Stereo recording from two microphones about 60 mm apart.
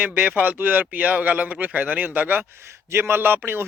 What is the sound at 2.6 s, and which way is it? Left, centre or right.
Speech, right.